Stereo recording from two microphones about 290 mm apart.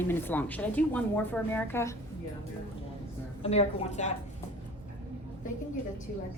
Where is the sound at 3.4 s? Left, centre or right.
Left.